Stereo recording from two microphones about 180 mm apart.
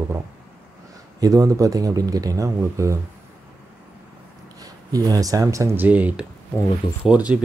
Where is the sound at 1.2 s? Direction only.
20° right (ahead or behind).